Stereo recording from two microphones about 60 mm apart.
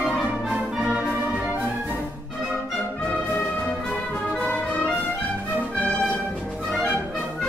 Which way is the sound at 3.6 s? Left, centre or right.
Centre.